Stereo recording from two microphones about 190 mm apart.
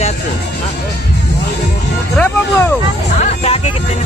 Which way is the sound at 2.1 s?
10° left (ahead or behind).